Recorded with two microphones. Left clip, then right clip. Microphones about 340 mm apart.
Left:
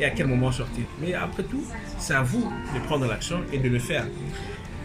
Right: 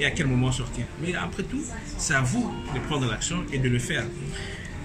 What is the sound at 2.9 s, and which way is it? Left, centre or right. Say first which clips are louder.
Speech: left 2 dB; centre.